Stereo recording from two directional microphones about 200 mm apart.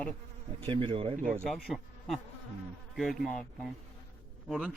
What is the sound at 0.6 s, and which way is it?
Speech, 25° right (ahead or behind).